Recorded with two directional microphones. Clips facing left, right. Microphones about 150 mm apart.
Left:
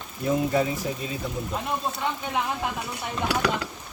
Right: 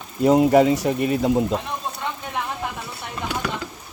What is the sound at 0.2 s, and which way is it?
Speech, 90° right.